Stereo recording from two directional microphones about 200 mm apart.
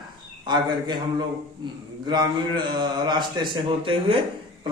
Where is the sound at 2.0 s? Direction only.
20° right (ahead or behind).